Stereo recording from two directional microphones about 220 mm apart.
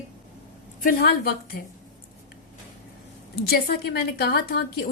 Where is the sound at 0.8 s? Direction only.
45° left (ahead or behind).